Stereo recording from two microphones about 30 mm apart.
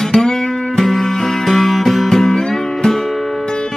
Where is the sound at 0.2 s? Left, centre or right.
Centre.